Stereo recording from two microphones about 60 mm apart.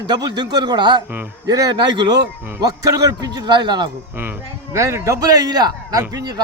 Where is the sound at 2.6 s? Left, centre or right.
Right.